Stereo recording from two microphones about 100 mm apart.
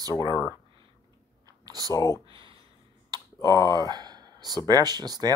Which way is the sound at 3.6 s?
45° right (ahead or behind).